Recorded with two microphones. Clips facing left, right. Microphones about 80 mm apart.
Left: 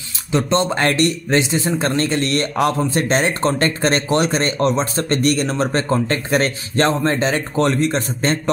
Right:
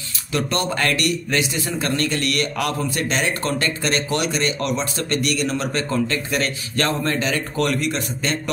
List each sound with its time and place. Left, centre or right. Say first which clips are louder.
0.3 s a man's voice: left 5 dB; left